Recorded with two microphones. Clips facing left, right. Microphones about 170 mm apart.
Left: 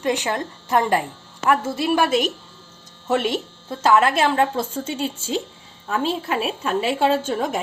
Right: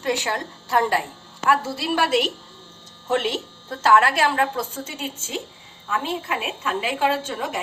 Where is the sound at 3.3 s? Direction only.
15° left (ahead or behind).